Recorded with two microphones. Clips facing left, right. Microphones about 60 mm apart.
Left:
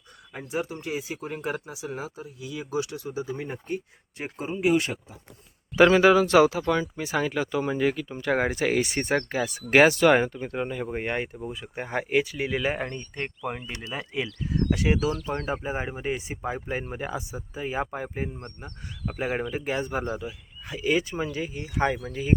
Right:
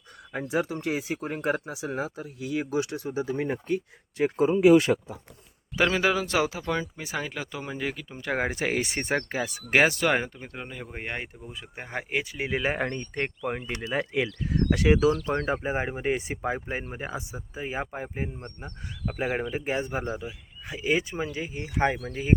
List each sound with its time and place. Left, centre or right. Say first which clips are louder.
0.3 s speech: right 3 dB; right
2.2 s speech: right 5 dB; right
4.9 s speech: right 10 dB; right
5.7 s speech: left 7 dB; centre
8.4 s speech: left 3 dB; right
9.6 s speech: left 5 dB; centre
12.5 s speech: even; right
12.8 s speech: right 3 dB; right
14.0 s speech: right 3 dB; right
15.6 s speech: right 2 dB; right
16.6 s speech: left 2 dB; centre
19.5 s speech: even; right
21.5 s speech: right 2 dB; right